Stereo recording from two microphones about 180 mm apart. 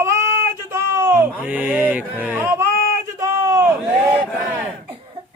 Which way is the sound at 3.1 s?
20° right (ahead or behind).